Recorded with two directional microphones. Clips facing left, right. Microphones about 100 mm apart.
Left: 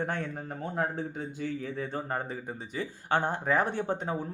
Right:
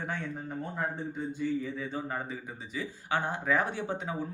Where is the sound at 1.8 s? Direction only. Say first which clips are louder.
Left 2 dB; 50° left (ahead or behind).